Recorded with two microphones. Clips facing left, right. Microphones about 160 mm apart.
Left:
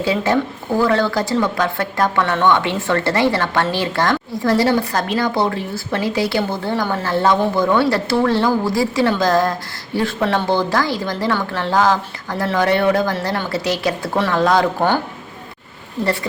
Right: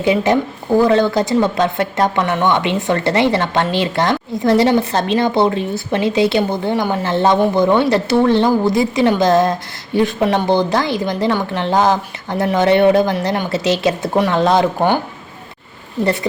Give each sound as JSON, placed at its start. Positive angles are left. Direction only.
{"t": 0.0, "sound": "speech", "side_deg": -20}